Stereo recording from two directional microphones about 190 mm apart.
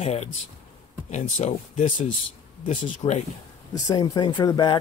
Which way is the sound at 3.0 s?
30° left (ahead or behind).